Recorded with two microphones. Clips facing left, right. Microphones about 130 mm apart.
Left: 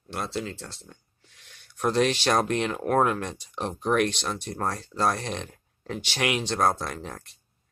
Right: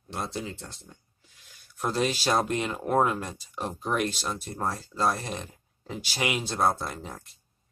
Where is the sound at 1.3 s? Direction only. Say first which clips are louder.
Left 2 dB; 70° left (ahead or behind).